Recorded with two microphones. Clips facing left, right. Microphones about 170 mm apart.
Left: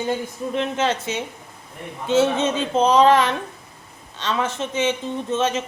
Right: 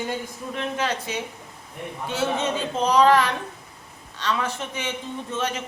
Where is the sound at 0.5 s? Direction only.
25° left (ahead or behind).